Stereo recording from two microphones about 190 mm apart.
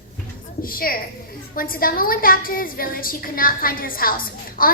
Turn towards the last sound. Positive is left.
turn(degrees=50)  # may be behind; listen again after turning